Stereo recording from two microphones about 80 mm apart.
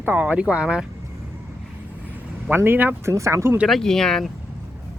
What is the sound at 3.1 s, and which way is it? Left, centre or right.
Speech, right.